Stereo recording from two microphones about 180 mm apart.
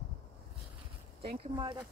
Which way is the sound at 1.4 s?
25° right (ahead or behind).